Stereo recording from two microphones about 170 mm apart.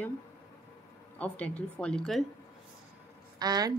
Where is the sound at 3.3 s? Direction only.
25° right (ahead or behind).